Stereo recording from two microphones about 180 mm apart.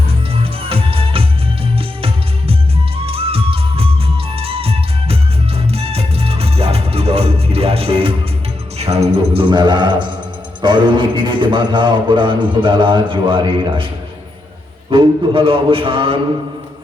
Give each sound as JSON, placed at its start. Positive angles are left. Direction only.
{"t": 0.4, "sound": "music", "side_deg": -30}
{"t": 10.6, "sound": "a man's voice", "side_deg": -25}
{"t": 14.8, "sound": "a man's voice", "side_deg": -30}